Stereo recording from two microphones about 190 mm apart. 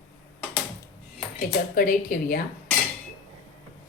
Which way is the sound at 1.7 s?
50° left (ahead or behind).